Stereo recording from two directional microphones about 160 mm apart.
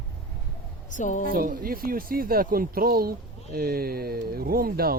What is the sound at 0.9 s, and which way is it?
Speech, 50° left (ahead or behind).